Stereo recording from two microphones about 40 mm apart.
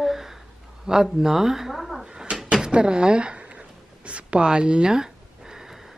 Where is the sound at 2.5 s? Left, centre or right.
Right.